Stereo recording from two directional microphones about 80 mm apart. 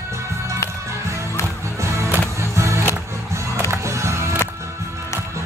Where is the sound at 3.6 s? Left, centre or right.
Right.